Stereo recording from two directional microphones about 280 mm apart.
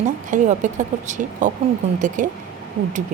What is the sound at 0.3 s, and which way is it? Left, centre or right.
Speech, right.